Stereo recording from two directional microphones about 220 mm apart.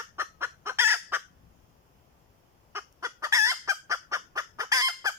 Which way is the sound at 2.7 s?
10° right (ahead or behind).